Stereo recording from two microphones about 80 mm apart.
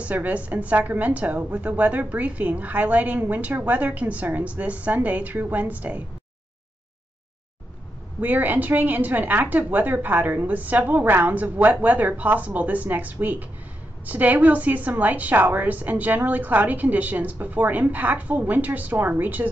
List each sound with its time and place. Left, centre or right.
0.0 s a woman's voice: centre
8.2 s a woman's voice: right